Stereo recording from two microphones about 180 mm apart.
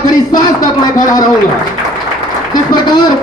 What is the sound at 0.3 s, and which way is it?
Speech, 45° left (ahead or behind).